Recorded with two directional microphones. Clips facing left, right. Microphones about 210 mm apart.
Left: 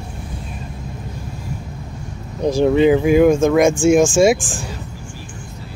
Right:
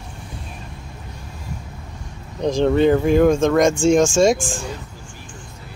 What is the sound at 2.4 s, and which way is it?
Speech, 10° left (ahead or behind).